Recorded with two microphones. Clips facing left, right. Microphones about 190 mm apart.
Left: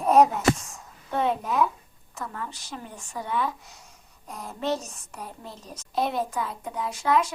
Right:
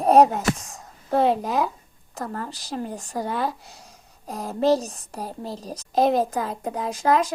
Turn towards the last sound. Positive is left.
turn(degrees=-40)  # may be behind; listen again after turning